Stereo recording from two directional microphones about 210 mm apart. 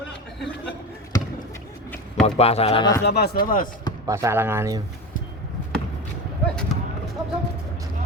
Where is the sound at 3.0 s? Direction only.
50° left (ahead or behind).